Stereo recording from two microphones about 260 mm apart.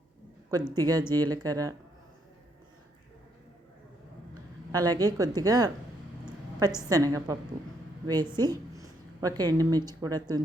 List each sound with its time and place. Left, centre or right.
0.8 s a woman's voice: centre
4.7 s a woman's voice: centre
6.2 s a sound: centre
6.8 s a woman's voice: centre